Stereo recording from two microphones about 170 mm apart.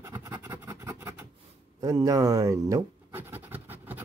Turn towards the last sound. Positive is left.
turn(degrees=-10)  # may be behind; listen again after turning